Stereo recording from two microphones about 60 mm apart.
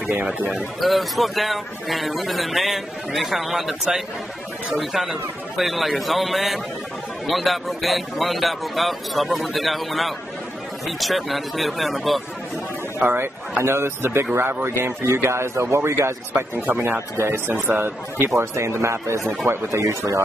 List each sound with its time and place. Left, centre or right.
0.5 s a man's voice: centre
13.0 s a man's voice: right
16.5 s speech: right
18.3 s a man's voice: right
19.2 s speech: right
19.7 s speech: right